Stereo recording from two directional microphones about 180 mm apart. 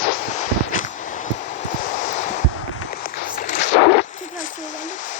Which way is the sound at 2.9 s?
55° left (ahead or behind).